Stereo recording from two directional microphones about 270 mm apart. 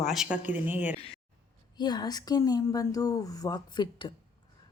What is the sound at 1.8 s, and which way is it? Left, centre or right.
Speech, centre.